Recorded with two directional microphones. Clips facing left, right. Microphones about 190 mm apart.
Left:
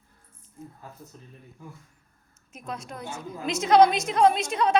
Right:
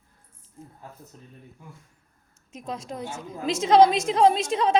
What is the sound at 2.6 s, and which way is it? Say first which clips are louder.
A woman's voice: right 3 dB; 25° right (ahead or behind).